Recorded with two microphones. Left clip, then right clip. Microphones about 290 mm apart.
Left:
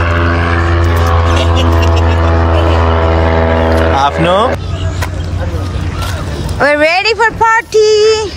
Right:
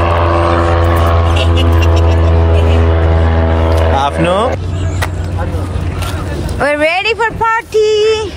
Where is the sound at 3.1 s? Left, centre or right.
Left.